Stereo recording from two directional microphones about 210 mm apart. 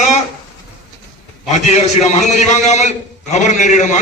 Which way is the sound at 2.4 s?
35° left (ahead or behind).